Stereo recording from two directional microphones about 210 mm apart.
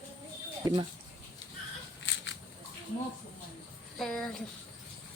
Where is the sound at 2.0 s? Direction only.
60° left (ahead or behind).